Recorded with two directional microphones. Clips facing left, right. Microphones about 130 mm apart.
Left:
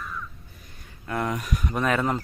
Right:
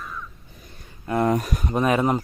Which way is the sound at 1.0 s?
25° right (ahead or behind).